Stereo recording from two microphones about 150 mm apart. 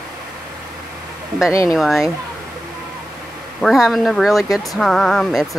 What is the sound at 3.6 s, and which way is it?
Speech, centre (ahead or behind).